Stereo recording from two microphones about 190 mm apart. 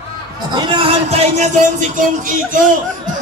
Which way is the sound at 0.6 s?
25° right (ahead or behind).